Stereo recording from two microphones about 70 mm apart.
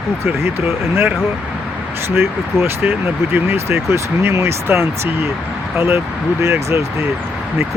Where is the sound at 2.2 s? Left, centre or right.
Right.